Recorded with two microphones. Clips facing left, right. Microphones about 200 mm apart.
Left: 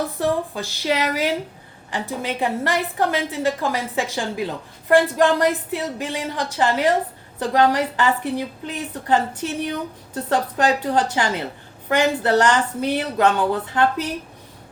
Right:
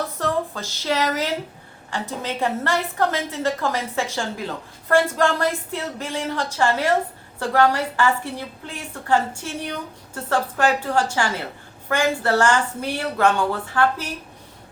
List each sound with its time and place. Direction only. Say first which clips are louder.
0.2 s a woman's voice: left 2 dB; 15° left (ahead or behind)